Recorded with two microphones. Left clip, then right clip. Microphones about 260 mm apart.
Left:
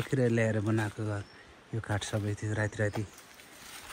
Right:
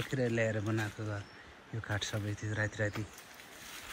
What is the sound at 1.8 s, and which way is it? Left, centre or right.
Speech, left.